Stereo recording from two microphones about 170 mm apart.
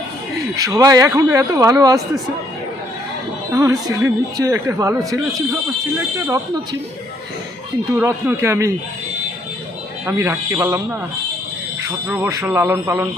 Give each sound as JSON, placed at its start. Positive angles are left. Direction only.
{"t": 0.5, "sound": "speech", "side_deg": -20}
{"t": 3.5, "sound": "a man's voice", "side_deg": -20}
{"t": 7.9, "sound": "a man's voice", "side_deg": -15}
{"t": 10.1, "sound": "a man's voice", "side_deg": -15}
{"t": 12.0, "sound": "a man's voice", "side_deg": -10}